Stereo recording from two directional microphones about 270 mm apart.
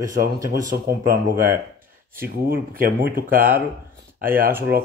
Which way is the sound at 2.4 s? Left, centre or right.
Right.